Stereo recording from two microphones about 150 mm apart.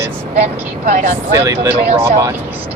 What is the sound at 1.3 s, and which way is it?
Speech, 20° right (ahead or behind).